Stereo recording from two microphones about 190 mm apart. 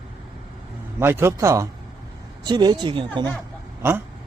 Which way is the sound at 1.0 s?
15° right (ahead or behind).